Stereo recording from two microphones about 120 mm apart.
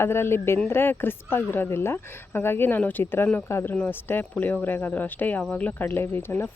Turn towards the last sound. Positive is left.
turn(degrees=20)  # may be behind; listen again after turning